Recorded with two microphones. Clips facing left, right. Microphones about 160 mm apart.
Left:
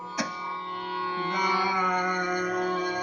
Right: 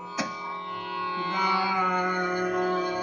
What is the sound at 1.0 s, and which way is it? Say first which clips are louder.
Music: left 1 dB; 20° right (ahead or behind).